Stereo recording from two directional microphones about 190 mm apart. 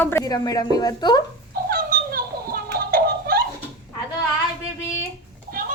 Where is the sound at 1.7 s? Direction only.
50° right (ahead or behind).